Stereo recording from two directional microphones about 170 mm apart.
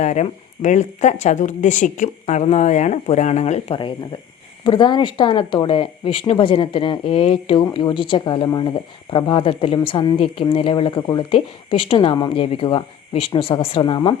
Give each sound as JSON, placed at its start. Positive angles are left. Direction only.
{"t": 0.0, "sound": "speech", "side_deg": 45}